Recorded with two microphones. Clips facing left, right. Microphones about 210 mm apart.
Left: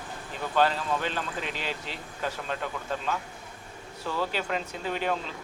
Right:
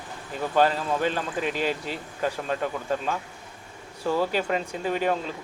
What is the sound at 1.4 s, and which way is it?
Speech, 45° right (ahead or behind).